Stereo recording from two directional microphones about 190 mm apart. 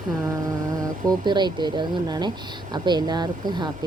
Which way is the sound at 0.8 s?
20° right (ahead or behind).